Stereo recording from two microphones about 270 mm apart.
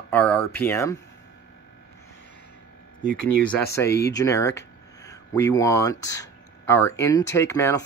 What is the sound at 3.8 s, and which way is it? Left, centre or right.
Speech, left.